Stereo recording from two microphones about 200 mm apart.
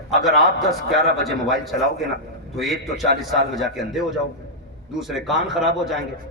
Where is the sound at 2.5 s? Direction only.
Centre (ahead or behind).